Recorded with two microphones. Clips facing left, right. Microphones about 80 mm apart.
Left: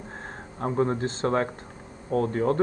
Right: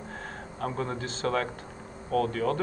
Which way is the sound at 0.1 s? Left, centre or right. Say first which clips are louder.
Even; left.